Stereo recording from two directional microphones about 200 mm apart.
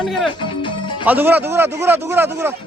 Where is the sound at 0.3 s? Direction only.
25° left (ahead or behind).